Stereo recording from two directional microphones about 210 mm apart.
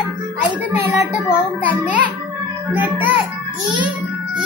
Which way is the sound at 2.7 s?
10° right (ahead or behind).